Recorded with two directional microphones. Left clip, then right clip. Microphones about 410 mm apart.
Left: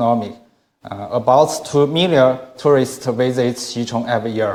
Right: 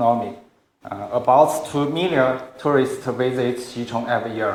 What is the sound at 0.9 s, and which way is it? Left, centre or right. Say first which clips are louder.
Speech: left 3 dB; left.